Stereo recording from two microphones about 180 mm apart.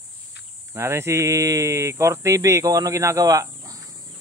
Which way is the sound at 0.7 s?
15° right (ahead or behind).